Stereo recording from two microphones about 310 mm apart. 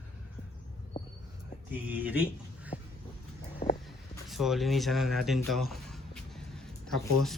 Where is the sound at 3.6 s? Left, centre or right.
Left.